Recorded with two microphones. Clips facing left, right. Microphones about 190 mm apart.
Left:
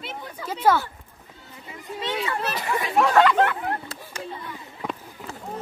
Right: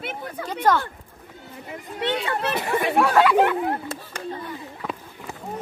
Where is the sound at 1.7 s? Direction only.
60° right (ahead or behind).